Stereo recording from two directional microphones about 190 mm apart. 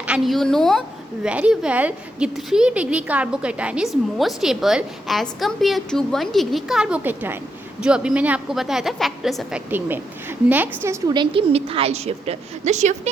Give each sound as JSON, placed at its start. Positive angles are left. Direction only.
{"t": 0.0, "sound": "a woman's voice", "side_deg": 0}
{"t": 10.8, "sound": "a woman's voice", "side_deg": -25}